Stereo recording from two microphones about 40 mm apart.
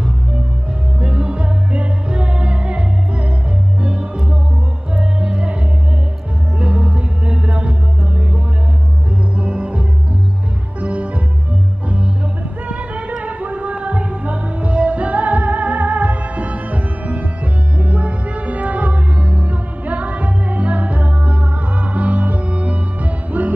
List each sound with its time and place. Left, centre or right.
1.0 s music: right
4.9 s music: right
6.6 s music: right
9.4 s music: right
12.6 s music: right